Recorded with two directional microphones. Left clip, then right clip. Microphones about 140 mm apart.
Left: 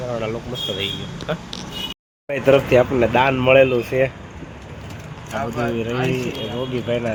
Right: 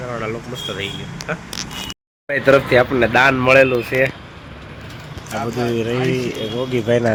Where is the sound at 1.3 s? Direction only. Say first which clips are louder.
Even; 25° left (ahead or behind).